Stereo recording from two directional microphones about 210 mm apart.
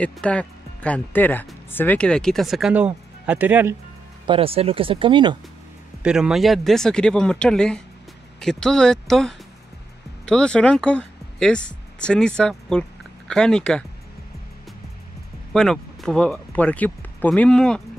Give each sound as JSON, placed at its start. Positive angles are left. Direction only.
{"t": 0.0, "sound": "speech", "side_deg": 5}
{"t": 4.3, "sound": "speech", "side_deg": -25}
{"t": 6.0, "sound": "speech", "side_deg": -5}
{"t": 15.5, "sound": "speech", "side_deg": 5}